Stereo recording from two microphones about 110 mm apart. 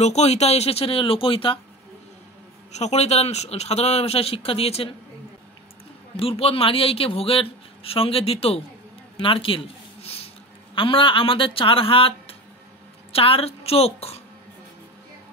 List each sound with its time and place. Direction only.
0.0 s a man's voice: 80° left; by 1.6 s 55° left (ahead or behind)
2.7 s speech: 90° left; by 4.9 s 65° left (ahead or behind)
6.1 s a man's voice: 60° left (ahead or behind)